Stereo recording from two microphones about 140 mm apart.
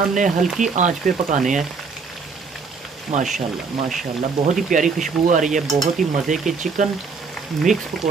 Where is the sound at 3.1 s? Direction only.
55° right (ahead or behind).